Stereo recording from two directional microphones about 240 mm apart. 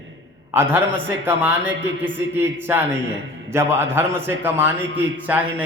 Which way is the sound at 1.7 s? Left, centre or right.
Right.